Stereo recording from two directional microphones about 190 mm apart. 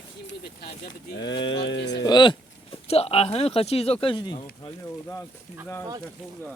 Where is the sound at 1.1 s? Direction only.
70° left (ahead or behind).